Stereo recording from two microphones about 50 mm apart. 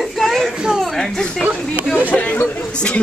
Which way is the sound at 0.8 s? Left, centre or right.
Centre.